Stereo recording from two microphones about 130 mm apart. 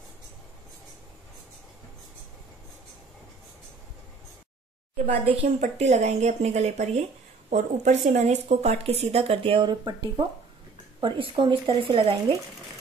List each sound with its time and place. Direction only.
4.9 s a woman's voice: 50° right (ahead or behind)
5.6 s speech: 60° right (ahead or behind); by 9.9 s 35° right (ahead or behind)
11.0 s speech: 40° right (ahead or behind)